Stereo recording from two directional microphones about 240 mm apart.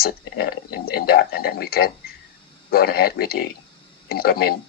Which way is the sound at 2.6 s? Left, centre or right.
Left.